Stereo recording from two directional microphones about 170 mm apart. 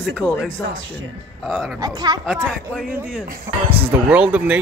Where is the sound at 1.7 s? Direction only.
25° right (ahead or behind).